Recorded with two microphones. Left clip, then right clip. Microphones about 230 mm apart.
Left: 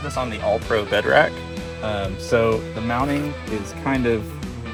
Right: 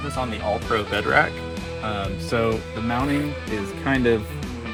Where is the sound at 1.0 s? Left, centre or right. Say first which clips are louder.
Left 3 dB; left.